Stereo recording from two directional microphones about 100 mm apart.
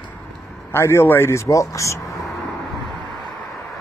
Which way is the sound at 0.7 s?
25° left (ahead or behind).